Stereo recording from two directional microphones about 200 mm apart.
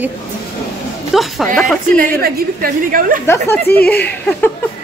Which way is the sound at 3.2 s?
10° left (ahead or behind).